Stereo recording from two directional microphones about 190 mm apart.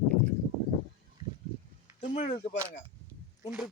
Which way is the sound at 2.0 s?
30° left (ahead or behind).